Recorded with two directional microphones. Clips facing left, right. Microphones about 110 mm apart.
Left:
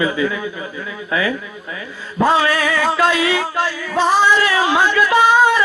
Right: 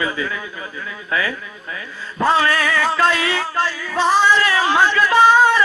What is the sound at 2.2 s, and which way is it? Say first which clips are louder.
Male singing: left 2 dB; 15° left (ahead or behind).